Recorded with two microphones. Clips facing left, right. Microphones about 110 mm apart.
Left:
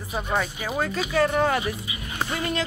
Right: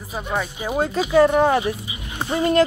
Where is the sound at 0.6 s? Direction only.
25° right (ahead or behind).